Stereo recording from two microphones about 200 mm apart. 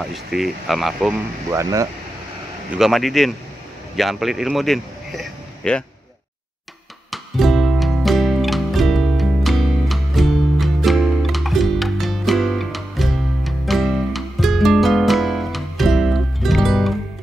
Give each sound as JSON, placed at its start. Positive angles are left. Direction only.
{"t": 0.1, "sound": "speech", "side_deg": 0}
{"t": 1.5, "sound": "speech", "side_deg": -15}
{"t": 2.7, "sound": "speech", "side_deg": 0}
{"t": 7.1, "sound": "music", "side_deg": 0}